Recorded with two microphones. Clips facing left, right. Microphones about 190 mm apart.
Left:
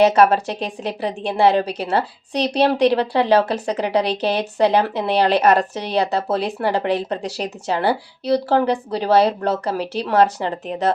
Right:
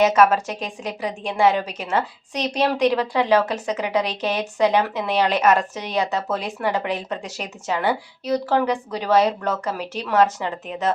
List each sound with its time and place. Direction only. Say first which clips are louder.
0.0 s a woman's voice: left 3 dB; 35° left (ahead or behind)